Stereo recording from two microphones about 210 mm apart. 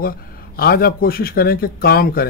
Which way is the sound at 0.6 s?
45° left (ahead or behind).